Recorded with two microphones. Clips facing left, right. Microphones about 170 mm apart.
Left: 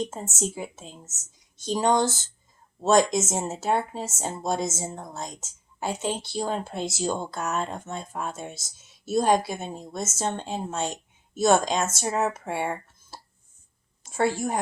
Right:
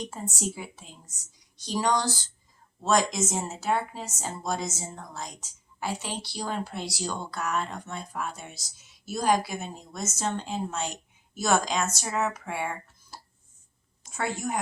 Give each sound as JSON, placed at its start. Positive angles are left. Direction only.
{"t": 0.0, "sound": "a woman's voice", "side_deg": 25}